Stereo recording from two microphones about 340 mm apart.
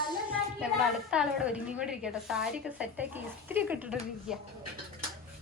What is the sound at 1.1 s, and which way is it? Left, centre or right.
A woman's voice, centre.